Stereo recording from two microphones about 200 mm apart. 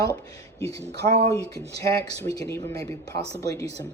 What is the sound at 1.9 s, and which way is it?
Speech, 15° left (ahead or behind).